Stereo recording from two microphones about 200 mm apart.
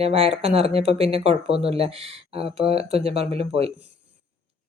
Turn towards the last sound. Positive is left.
turn(degrees=-30)  # may be behind; listen again after turning